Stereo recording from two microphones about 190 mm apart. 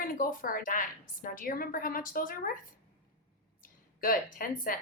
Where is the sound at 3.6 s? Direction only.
45° left (ahead or behind).